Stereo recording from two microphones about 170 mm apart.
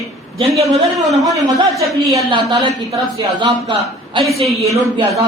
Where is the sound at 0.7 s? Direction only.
Centre (ahead or behind).